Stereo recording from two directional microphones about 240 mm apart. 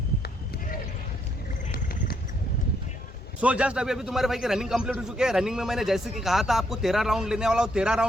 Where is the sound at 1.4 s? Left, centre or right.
Left.